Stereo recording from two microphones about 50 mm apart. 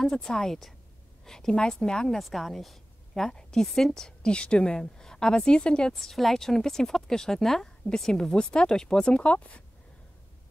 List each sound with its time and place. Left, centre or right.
0.0 s a woman's voice: centre
5.9 s a woman's voice: centre
9.2 s speech: left